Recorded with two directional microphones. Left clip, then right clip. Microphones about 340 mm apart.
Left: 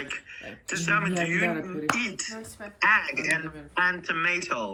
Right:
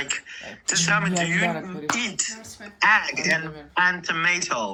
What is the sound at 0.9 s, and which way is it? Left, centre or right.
Speech, centre.